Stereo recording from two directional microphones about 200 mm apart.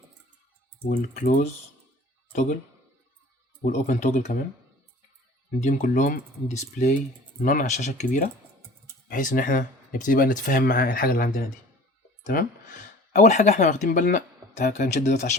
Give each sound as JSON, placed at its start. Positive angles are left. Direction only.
{"t": 0.9, "sound": "speech", "side_deg": 40}
{"t": 3.6, "sound": "speech", "side_deg": 35}
{"t": 5.6, "sound": "speech", "side_deg": 40}